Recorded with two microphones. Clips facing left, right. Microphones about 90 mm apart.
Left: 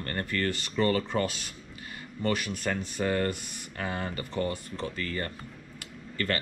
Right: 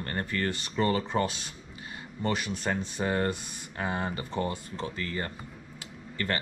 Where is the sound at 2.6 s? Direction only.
25° right (ahead or behind).